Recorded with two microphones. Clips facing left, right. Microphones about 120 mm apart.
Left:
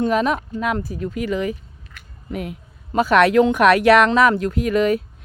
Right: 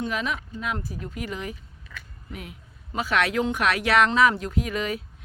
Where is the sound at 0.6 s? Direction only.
70° left (ahead or behind); by 1.5 s 90° left.